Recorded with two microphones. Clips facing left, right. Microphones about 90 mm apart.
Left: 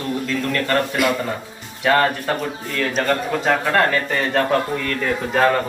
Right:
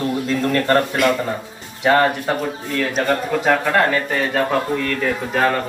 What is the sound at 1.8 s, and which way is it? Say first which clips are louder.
Speech: right 2 dB; 20° right (ahead or behind).